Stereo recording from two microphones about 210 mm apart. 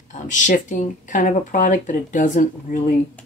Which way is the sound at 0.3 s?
35° left (ahead or behind).